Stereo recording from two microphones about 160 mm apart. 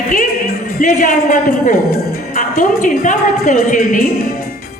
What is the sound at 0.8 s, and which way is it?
A woman's voice, 55° left (ahead or behind).